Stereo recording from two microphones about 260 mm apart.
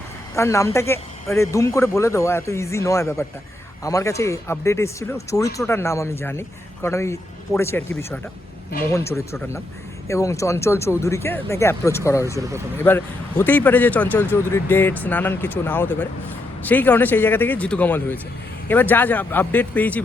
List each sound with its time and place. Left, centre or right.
0.3 s speech: centre
12.4 s speech: centre
12.8 s speech: centre